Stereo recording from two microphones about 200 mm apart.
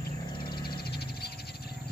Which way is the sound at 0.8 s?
50° left (ahead or behind).